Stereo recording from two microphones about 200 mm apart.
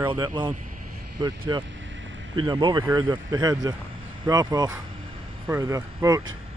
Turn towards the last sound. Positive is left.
turn(degrees=-15)  # may be behind; listen again after turning